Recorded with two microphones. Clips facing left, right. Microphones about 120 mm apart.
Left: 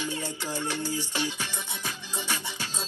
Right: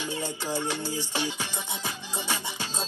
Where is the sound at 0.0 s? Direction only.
15° right (ahead or behind).